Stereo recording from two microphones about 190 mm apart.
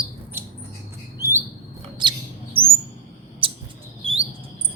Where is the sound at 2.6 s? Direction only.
30° right (ahead or behind).